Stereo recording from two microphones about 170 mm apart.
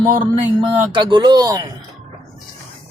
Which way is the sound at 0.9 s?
25° right (ahead or behind).